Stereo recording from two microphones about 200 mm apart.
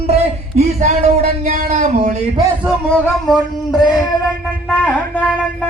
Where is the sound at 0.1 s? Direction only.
35° right (ahead or behind).